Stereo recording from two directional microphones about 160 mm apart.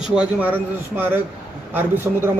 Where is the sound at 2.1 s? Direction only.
10° right (ahead or behind).